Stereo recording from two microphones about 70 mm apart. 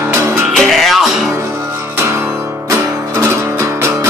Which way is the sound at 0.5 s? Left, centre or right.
Centre.